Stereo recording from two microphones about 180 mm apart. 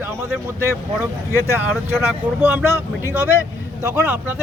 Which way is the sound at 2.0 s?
10° right (ahead or behind).